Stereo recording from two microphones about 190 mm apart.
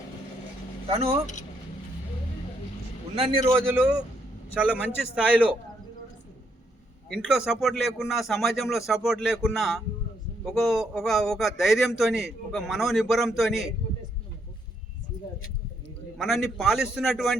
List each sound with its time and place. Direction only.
0.9 s speech: 30° right (ahead or behind)
3.2 s a man's voice: 30° right (ahead or behind)
3.5 s a man's voice: 10° right (ahead or behind)
7.1 s speech: 5° right (ahead or behind)
16.1 s speech: centre (ahead or behind)